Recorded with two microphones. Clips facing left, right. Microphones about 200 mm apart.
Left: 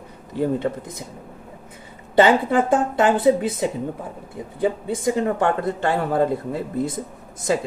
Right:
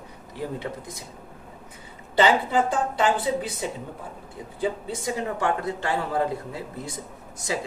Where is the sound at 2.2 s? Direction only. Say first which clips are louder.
Left 5 dB; 55° left (ahead or behind).